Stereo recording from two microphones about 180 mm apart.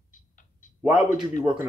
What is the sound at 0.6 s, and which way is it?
Tick-tock, 45° left (ahead or behind).